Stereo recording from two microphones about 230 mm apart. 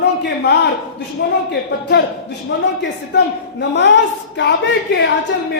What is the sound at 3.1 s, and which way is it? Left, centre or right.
A woman's voice, left.